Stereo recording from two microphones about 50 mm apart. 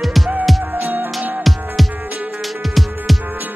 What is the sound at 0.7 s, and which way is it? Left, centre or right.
Music, right.